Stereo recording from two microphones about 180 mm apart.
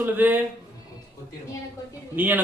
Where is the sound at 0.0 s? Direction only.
10° right (ahead or behind).